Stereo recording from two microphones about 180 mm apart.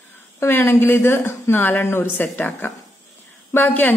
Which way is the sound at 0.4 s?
15° left (ahead or behind).